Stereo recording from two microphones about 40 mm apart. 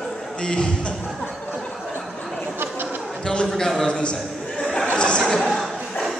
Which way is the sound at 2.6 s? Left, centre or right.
Right.